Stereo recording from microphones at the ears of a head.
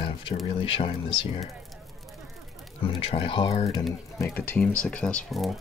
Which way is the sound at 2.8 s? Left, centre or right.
Left.